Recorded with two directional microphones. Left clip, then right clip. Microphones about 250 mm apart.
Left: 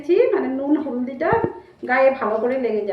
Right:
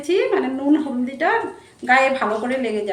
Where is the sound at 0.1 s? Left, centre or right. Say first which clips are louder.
Left 2 dB; right.